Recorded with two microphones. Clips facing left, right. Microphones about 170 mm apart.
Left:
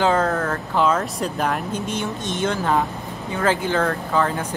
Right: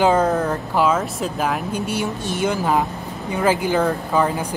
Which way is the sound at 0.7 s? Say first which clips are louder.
Right 1 dB; 5° right (ahead or behind).